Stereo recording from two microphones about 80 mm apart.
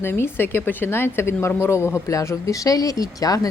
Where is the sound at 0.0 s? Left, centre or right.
Left.